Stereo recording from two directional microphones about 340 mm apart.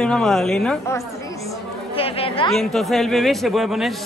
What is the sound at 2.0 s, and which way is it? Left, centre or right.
Chatter, centre.